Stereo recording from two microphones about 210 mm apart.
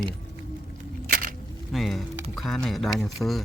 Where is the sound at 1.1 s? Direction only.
40° right (ahead or behind).